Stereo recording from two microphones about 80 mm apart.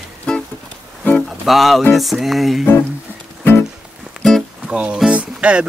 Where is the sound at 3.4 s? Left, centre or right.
Left.